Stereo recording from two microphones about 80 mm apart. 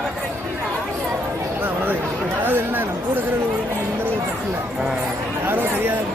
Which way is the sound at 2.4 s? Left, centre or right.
Right.